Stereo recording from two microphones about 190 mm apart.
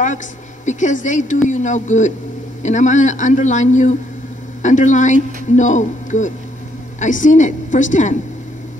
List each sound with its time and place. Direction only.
0.7 s speech: 40° left (ahead or behind)